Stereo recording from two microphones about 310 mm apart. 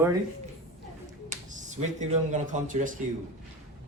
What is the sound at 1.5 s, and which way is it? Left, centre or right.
A man's voice, right.